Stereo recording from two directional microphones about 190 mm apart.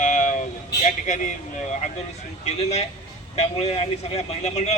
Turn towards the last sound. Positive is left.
turn(degrees=35)  # may be behind; listen again after turning